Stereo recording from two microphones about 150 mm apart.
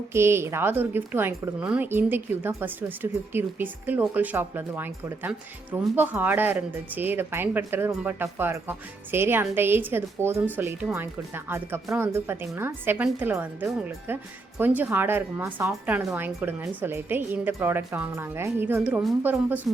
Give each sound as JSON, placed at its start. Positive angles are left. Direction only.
{"t": 0.1, "sound": "a woman's voice", "side_deg": -15}